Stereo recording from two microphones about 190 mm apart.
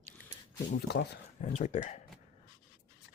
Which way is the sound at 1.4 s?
40° left (ahead or behind).